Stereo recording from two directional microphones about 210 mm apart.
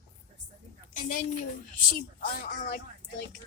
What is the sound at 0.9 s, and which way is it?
A woman's voice, 40° left (ahead or behind).